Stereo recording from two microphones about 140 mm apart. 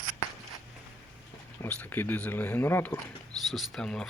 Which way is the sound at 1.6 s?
15° left (ahead or behind).